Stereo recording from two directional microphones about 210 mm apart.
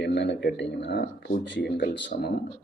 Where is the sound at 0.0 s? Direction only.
55° left (ahead or behind).